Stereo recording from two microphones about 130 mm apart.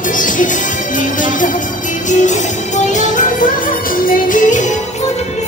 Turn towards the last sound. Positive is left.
turn(degrees=80)